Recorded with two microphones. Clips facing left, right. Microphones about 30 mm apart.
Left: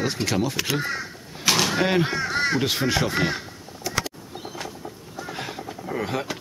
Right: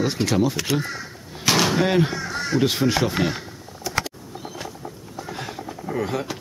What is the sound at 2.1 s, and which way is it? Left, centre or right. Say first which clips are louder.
Crow: left 2 dB; left.